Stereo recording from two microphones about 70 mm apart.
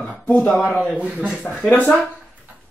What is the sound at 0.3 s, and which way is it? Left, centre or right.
Speech, left.